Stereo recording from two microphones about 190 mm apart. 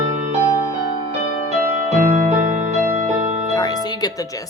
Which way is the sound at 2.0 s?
45° right (ahead or behind).